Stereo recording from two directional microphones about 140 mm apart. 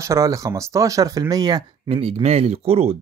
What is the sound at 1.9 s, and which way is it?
Speech, 45° right (ahead or behind).